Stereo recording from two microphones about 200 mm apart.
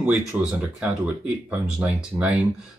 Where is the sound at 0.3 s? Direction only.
5° right (ahead or behind).